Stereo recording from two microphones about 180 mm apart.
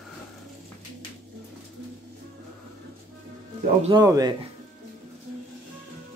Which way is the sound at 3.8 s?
20° right (ahead or behind).